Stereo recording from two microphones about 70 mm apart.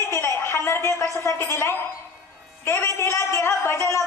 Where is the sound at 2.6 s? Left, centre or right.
Left.